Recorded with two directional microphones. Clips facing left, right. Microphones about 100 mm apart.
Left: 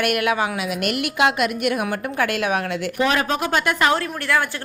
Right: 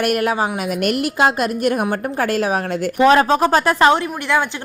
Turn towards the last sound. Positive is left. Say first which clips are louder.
# right 3 dB
turn(degrees=-20)  # may be behind; listen again after turning